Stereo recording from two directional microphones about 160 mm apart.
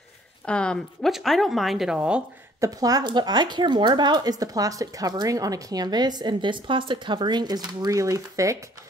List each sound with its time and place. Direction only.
0.5 s speech: 5° left (ahead or behind)
2.6 s speech: 25° right (ahead or behind)